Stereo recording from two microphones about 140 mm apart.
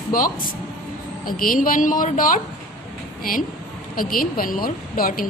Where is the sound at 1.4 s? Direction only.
85° left.